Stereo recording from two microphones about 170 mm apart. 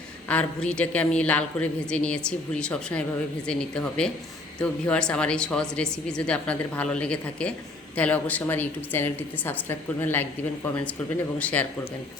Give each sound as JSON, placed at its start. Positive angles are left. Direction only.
{"t": 0.3, "sound": "a woman's voice", "side_deg": 5}
{"t": 11.3, "sound": "a woman's voice", "side_deg": 10}